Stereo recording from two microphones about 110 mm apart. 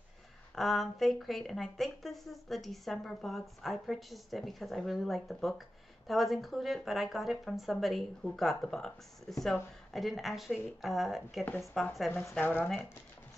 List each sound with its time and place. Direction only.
0.6 s speech: centre (ahead or behind)
11.4 s speech: 20° left (ahead or behind)
11.7 s speech: centre (ahead or behind)
12.4 s speech: 15° left (ahead or behind)